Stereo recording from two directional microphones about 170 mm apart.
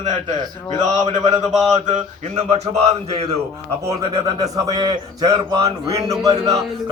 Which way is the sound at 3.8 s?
20° right (ahead or behind).